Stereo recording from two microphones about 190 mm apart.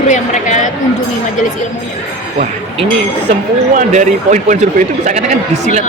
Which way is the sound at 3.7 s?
40° right (ahead or behind).